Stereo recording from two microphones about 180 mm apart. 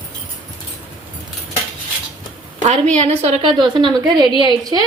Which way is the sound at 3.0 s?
35° right (ahead or behind).